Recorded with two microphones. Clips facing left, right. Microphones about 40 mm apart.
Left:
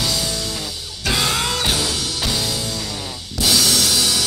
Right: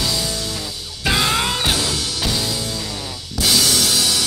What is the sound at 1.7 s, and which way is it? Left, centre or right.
Music, centre.